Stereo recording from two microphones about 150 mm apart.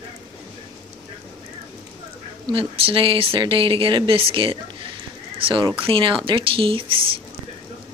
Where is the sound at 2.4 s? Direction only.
35° right (ahead or behind).